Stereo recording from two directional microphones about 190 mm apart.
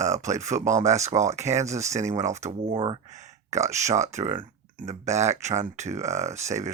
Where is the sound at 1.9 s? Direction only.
35° right (ahead or behind).